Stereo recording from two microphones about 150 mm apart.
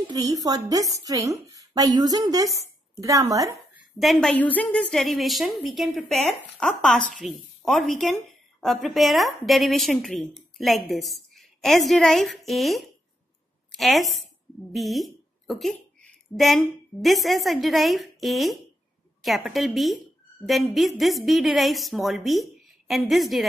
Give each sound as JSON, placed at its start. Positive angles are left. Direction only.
{"t": 0.1, "sound": "a woman's voice", "side_deg": -25}
{"t": 3.7, "sound": "a woman's voice", "side_deg": 0}